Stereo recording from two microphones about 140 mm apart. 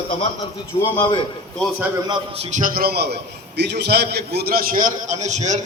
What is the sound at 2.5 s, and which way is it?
Speech, 80° right.